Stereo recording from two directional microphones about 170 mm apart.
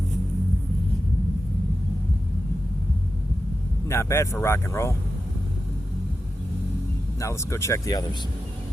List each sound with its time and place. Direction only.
3.8 s speech: 15° left (ahead or behind)
7.2 s speech: 15° left (ahead or behind)